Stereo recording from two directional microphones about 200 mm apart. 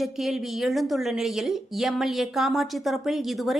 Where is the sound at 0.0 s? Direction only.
Centre (ahead or behind).